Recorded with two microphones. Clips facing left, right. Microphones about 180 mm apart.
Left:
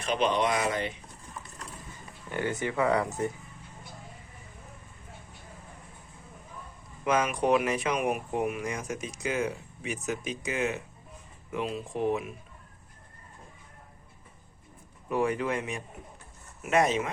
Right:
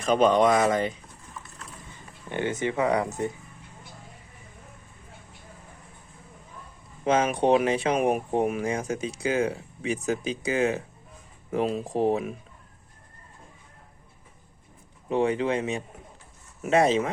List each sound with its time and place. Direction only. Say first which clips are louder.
0.0 s speech: right 7 dB; 45° right (ahead or behind)
2.3 s speech: right 3 dB; 20° right (ahead or behind)
7.0 s speech: right 4 dB; 30° right (ahead or behind)
15.1 s speech: right 4 dB; 30° right (ahead or behind)